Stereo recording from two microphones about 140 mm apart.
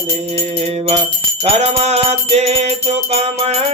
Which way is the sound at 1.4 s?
50° right (ahead or behind).